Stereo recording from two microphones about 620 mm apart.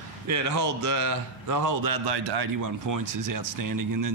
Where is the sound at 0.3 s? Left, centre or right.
Right.